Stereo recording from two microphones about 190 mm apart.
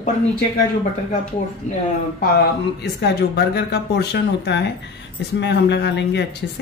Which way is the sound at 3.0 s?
60° left (ahead or behind).